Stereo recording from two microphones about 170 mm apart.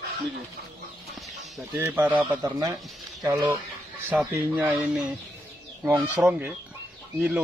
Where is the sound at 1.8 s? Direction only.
10° right (ahead or behind).